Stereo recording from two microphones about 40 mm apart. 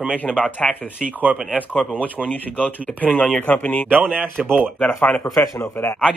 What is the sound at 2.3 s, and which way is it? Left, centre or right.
Speech, left.